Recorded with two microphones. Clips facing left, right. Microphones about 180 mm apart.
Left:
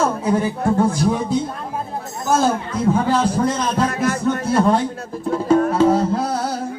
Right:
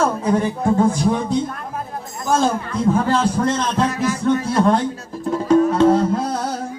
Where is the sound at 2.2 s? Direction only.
5° left (ahead or behind).